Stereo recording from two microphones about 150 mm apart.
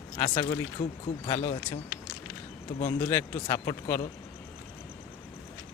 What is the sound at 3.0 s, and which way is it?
Speech, 15° left (ahead or behind).